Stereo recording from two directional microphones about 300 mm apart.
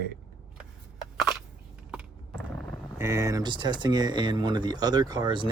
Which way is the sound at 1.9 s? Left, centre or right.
Centre.